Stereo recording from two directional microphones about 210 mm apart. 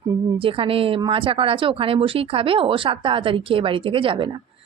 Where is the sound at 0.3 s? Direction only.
25° right (ahead or behind).